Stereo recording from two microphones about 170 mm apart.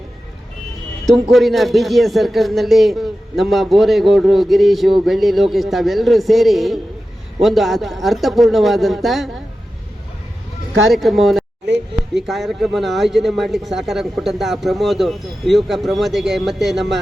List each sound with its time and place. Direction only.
1.1 s speech: centre (ahead or behind)
10.8 s speech: centre (ahead or behind)
11.6 s a sound: 90° right
12.2 s speech: centre (ahead or behind)